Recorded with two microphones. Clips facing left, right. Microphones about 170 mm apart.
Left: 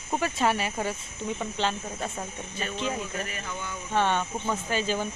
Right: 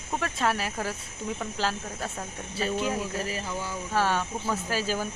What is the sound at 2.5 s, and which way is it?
Speech, 35° right (ahead or behind).